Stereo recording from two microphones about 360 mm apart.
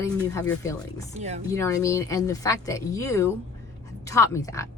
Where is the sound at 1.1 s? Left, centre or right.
Centre.